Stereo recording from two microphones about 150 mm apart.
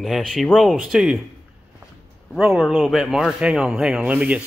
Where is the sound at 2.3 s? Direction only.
5° right (ahead or behind).